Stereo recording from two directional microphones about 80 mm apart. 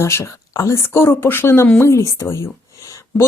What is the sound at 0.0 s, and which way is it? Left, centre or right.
A woman's voice, left.